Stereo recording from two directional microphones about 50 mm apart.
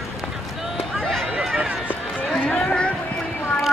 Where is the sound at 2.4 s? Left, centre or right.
Centre.